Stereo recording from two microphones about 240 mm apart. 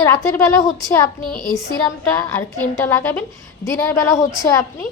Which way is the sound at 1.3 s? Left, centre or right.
Left.